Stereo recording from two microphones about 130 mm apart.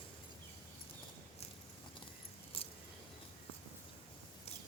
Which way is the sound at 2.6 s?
45° left (ahead or behind).